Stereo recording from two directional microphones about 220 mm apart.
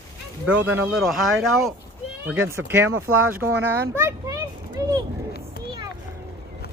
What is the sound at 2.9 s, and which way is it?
Speech, 70° right (ahead or behind).